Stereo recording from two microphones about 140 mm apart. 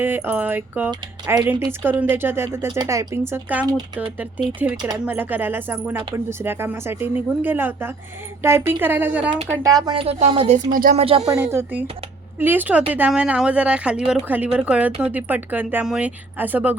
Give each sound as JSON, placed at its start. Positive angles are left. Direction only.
{"t": 0.0, "sound": "speech", "side_deg": -15}
{"t": 3.7, "sound": "speech", "side_deg": -30}
{"t": 4.6, "sound": "speech", "side_deg": -15}
{"t": 9.5, "sound": "speech", "side_deg": -25}
{"t": 10.1, "sound": "speech", "side_deg": -45}
{"t": 10.7, "sound": "speech", "side_deg": -75}
{"t": 10.9, "sound": "speech", "side_deg": -45}
{"t": 11.3, "sound": "speech", "side_deg": -20}